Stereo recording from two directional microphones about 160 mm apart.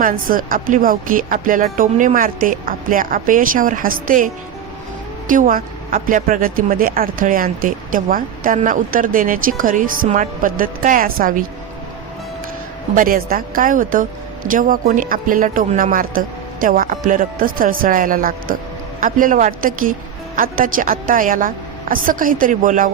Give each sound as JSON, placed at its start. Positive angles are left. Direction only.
{"t": 0.0, "sound": "speech", "side_deg": -60}
{"t": 5.3, "sound": "speech", "side_deg": -60}
{"t": 13.0, "sound": "speech", "side_deg": -60}